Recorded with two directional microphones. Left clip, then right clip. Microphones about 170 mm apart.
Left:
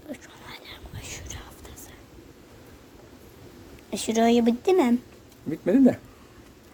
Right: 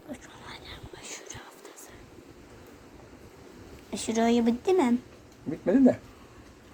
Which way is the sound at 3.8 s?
45° left (ahead or behind).